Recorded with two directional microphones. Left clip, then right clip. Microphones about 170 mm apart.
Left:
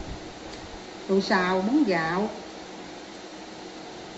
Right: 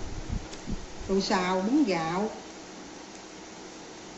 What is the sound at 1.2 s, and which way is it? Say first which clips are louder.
A woman's voice: left 3 dB; 20° right (ahead or behind).